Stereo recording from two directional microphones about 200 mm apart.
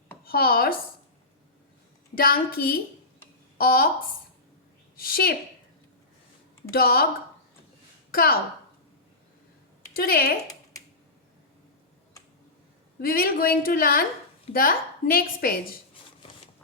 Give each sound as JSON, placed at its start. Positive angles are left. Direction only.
{"t": 0.3, "sound": "a woman's voice", "side_deg": 50}
{"t": 2.1, "sound": "a woman's voice", "side_deg": 45}
{"t": 4.9, "sound": "a woman's voice", "side_deg": 50}
{"t": 6.7, "sound": "a woman's voice", "side_deg": 50}
{"t": 8.1, "sound": "a woman's voice", "side_deg": 45}
{"t": 9.9, "sound": "a woman's voice", "side_deg": 50}
{"t": 13.0, "sound": "a woman's voice", "side_deg": 45}